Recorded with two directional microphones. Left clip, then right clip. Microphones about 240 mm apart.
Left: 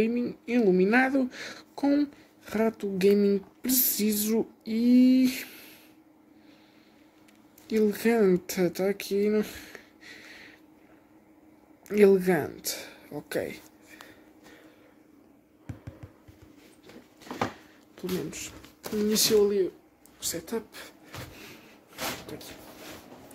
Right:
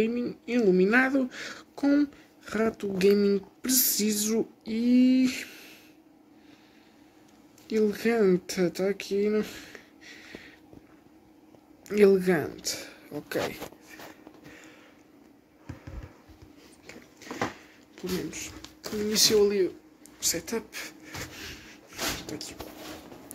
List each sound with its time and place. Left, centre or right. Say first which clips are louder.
0.0 s speech: even; centre
7.6 s speech: left 1 dB; centre
11.9 s speech: even; centre
17.3 s a sound: left 1 dB; left
17.9 s speech: even; left
19.1 s speech: right 1 dB; centre
20.2 s a sound: right 3 dB; centre
22.3 s speech: right 4 dB; centre